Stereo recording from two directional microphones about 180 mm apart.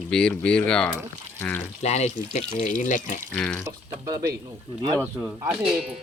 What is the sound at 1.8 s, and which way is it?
Speech, 40° left (ahead or behind).